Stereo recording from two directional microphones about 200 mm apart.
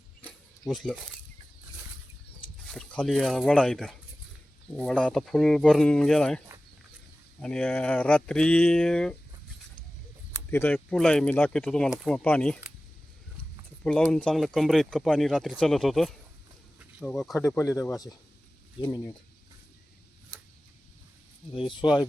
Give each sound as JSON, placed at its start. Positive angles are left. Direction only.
{"t": 0.7, "sound": "speech", "side_deg": 0}
{"t": 2.6, "sound": "speech", "side_deg": 5}
{"t": 10.5, "sound": "speech", "side_deg": 10}
{"t": 13.8, "sound": "speech", "side_deg": 5}
{"t": 21.6, "sound": "speech", "side_deg": 25}